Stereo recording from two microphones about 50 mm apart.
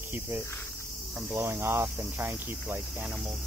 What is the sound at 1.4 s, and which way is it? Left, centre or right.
Speech, right.